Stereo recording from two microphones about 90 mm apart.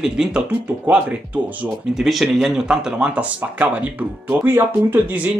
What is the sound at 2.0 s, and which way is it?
Speech, centre (ahead or behind).